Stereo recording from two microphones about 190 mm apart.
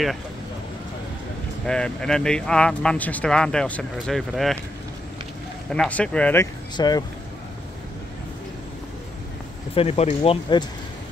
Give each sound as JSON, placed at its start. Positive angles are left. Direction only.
{"t": 1.7, "sound": "speech", "side_deg": 5}
{"t": 5.7, "sound": "speech", "side_deg": 5}
{"t": 9.8, "sound": "speech", "side_deg": 35}